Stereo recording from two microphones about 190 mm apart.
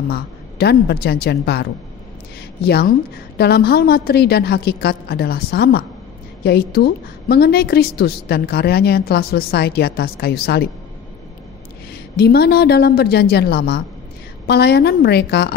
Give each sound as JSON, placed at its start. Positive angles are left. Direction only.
{"t": 0.1, "sound": "a woman's voice", "side_deg": 60}
{"t": 12.2, "sound": "a woman's voice", "side_deg": 55}